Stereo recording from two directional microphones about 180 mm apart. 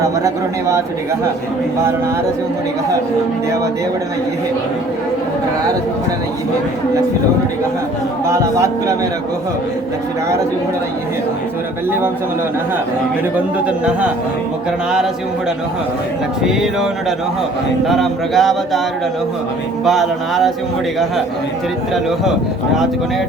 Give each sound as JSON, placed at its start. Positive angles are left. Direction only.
{"t": 0.0, "sound": "speech", "side_deg": -15}
{"t": 8.3, "sound": "speech", "side_deg": -15}
{"t": 13.3, "sound": "speech", "side_deg": -5}
{"t": 16.4, "sound": "speech", "side_deg": 0}
{"t": 19.8, "sound": "speech", "side_deg": 0}